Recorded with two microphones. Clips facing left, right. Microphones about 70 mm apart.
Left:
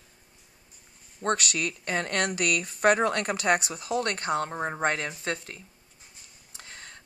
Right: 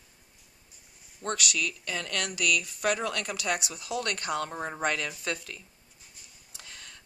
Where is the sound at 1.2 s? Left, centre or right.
Left.